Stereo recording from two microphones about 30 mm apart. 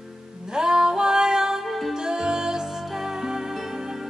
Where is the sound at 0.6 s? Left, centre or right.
Right.